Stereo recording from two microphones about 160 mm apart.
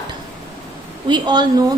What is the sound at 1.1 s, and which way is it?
Speech, 25° right (ahead or behind).